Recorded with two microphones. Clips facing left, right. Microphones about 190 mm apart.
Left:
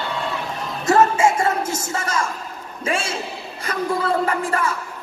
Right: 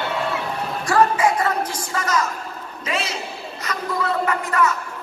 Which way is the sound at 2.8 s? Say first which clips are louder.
Left 3 dB; 30° left (ahead or behind).